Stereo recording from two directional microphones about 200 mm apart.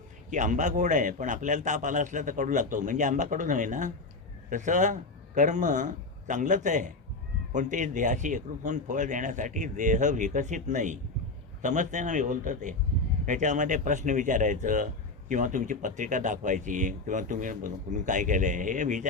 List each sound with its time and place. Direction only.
0.3 s a man's voice: 40° right (ahead or behind)